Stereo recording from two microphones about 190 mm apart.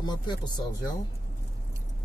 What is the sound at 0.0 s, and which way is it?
Speech, 20° left (ahead or behind).